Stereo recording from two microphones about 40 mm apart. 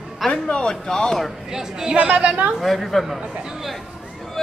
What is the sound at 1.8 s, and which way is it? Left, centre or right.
Speech, right.